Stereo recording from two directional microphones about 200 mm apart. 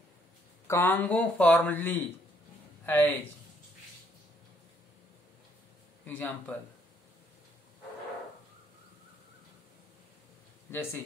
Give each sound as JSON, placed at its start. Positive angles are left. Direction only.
{"t": 0.7, "sound": "speech", "side_deg": 10}
{"t": 6.0, "sound": "speech", "side_deg": 10}
{"t": 10.7, "sound": "speech", "side_deg": 10}